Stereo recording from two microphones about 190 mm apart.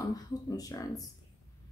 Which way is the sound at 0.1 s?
20° left (ahead or behind).